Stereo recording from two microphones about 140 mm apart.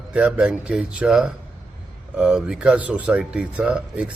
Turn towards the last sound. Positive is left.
turn(degrees=-10)  # may be behind; listen again after turning